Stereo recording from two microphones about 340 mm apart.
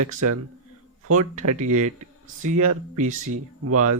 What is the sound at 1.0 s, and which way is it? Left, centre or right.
Speech, right.